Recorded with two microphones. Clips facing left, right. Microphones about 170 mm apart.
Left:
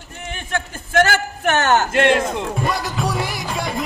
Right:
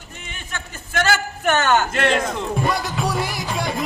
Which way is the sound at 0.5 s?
50° left (ahead or behind).